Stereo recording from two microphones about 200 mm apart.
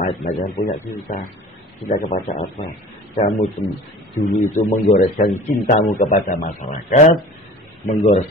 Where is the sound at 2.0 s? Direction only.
40° left (ahead or behind).